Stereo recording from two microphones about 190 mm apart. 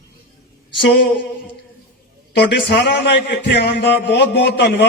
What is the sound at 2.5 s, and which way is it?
A man's voice, 60° left (ahead or behind).